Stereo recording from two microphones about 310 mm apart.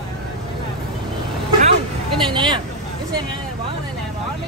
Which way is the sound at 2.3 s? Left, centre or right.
Centre.